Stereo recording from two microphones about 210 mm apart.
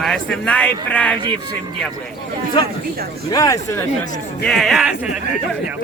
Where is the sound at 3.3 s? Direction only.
15° left (ahead or behind).